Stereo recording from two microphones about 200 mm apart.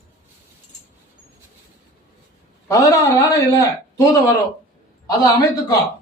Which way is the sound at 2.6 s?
15° left (ahead or behind).